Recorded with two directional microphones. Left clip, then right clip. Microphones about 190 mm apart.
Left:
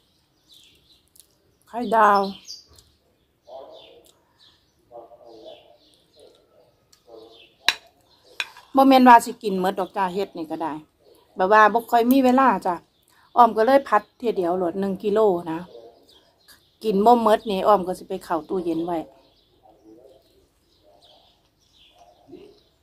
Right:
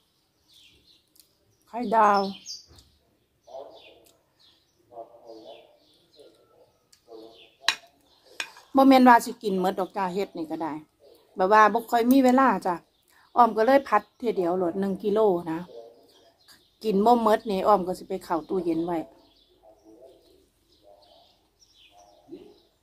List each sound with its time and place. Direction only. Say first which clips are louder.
1.7 s speech: left 3 dB; 15° left (ahead or behind)
8.5 s speech: left 3 dB; 10° left (ahead or behind)
16.4 s a sound: left 3 dB; 10° left (ahead or behind)
17.5 s speech: left 3 dB; 10° left (ahead or behind)